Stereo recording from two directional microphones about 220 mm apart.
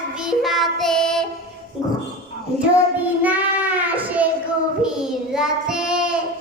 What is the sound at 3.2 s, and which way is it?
Child singing, 5° right (ahead or behind).